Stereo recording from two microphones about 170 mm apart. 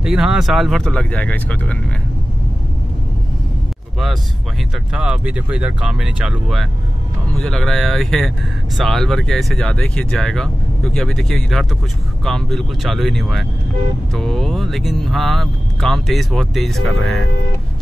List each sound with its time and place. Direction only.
0.0 s speech: 5° right (ahead or behind)
4.9 s speech: 5° right (ahead or behind)